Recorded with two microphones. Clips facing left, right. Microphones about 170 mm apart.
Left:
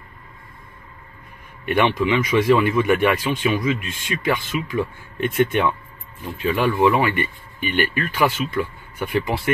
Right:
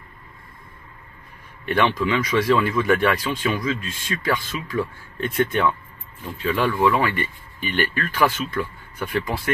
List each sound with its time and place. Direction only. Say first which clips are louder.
1.7 s speech: left 2 dB; 20° left (ahead or behind)